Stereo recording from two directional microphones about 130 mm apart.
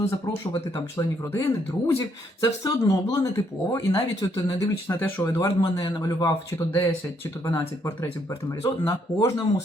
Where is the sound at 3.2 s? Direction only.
25° left (ahead or behind).